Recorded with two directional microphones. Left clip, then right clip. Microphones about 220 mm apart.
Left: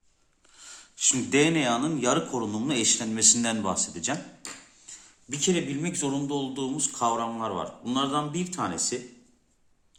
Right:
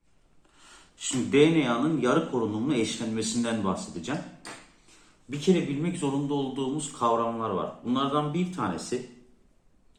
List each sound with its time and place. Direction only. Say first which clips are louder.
0.6 s speech: left 9 dB; 30° left (ahead or behind)
5.3 s a man's voice: right 1 dB; 50° left (ahead or behind)